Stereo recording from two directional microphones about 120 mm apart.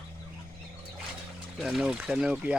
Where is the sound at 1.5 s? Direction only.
5° right (ahead or behind).